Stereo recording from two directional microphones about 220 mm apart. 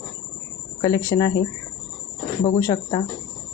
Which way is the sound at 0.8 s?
15° left (ahead or behind).